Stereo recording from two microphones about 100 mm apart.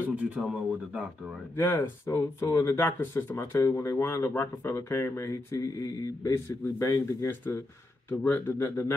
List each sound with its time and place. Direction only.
0.0 s speech: 15° right (ahead or behind)
1.6 s speech: 25° left (ahead or behind)